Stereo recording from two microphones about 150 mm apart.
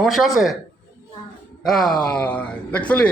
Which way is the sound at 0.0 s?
Centre (ahead or behind).